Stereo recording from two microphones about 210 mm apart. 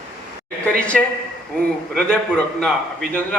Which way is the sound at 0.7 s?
5° left (ahead or behind).